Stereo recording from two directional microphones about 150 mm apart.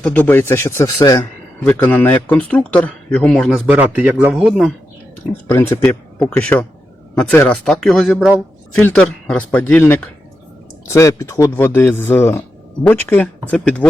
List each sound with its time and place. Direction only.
0.0 s a man's voice: 10° left (ahead or behind)
3.7 s a man's voice: 10° right (ahead or behind)
5.5 s a man's voice: 15° left (ahead or behind)